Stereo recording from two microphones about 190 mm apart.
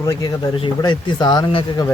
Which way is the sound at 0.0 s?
15° left (ahead or behind).